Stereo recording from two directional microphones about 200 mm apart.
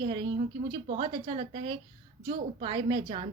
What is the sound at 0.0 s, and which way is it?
A woman's voice, 25° right (ahead or behind).